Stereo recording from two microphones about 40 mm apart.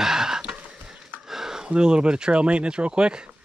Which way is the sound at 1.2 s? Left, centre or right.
Centre.